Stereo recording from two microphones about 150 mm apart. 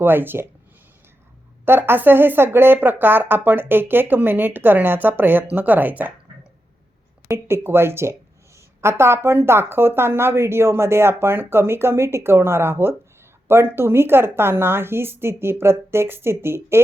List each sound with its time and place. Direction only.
0.0 s speech: 15° right (ahead or behind)
1.6 s speech: 15° right (ahead or behind)
7.3 s speech: 15° right (ahead or behind)